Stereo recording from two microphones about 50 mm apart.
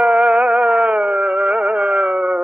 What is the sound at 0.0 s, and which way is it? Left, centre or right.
Music, right.